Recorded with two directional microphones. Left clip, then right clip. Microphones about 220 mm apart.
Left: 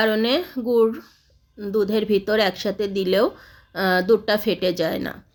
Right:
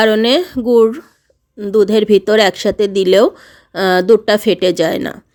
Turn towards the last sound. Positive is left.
turn(degrees=-45)  # may be behind; listen again after turning